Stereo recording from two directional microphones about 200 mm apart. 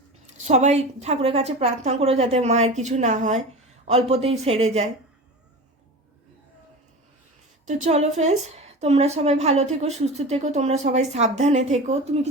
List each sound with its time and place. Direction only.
0.3 s a woman's voice: 35° right (ahead or behind)
7.6 s a woman's voice: 35° right (ahead or behind)